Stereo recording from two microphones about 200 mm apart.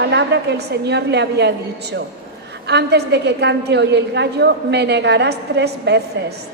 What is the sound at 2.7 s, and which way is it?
A woman's voice, 55° right (ahead or behind).